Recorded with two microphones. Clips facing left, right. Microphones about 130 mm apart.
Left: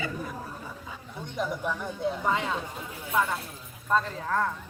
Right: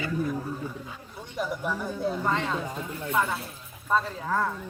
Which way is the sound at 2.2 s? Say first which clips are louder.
Right 1 dB; 10° left (ahead or behind).